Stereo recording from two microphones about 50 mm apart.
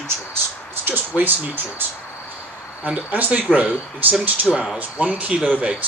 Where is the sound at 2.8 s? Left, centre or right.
Right.